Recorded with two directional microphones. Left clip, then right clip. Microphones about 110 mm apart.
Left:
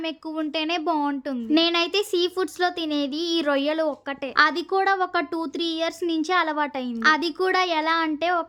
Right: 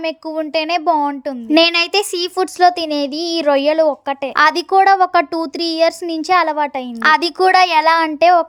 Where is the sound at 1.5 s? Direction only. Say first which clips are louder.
Right 9 dB; 90° right; by 4.3 s 45° right (ahead or behind).